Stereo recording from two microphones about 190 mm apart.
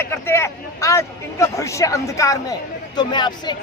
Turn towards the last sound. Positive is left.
turn(degrees=25)  # may be behind; listen again after turning